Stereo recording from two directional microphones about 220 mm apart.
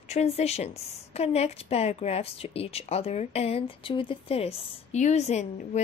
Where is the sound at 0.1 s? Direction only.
30° left (ahead or behind).